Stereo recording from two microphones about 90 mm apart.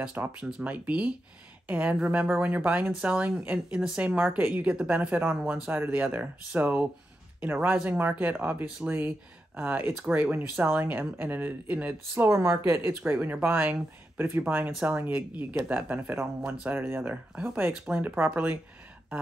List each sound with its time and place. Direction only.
0.0 s a woman's voice: 15° right (ahead or behind)
12.3 s speech: 30° right (ahead or behind)